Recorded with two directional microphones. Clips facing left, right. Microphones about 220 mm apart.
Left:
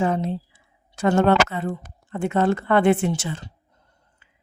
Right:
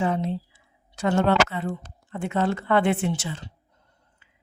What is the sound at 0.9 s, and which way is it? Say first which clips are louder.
A woman's voice: left 3 dB; 50° left (ahead or behind).